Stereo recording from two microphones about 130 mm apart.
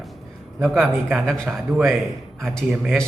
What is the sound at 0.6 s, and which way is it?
A man's voice, centre (ahead or behind).